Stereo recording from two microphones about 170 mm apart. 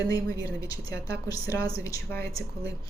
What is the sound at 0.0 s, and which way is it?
A woman's voice, 20° left (ahead or behind).